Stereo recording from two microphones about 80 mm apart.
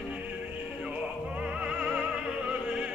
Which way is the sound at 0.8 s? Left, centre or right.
Centre.